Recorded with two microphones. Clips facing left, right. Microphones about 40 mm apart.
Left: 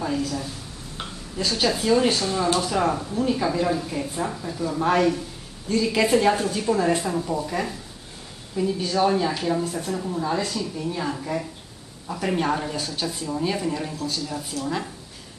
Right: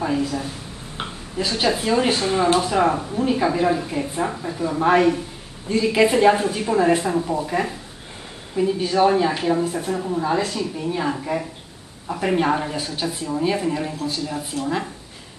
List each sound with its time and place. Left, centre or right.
0.0 s speech: centre